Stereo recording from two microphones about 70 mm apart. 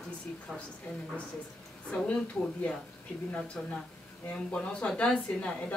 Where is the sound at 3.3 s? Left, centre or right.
Centre.